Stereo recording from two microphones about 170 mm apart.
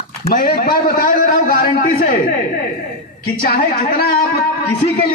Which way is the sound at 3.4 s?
60° left (ahead or behind).